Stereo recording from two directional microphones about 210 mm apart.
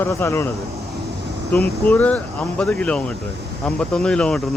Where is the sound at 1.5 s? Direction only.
5° left (ahead or behind).